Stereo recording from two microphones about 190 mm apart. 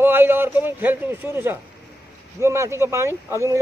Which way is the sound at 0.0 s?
10° right (ahead or behind).